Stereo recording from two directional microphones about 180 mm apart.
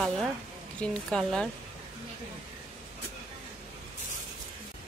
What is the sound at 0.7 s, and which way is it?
Speech, 5° left (ahead or behind).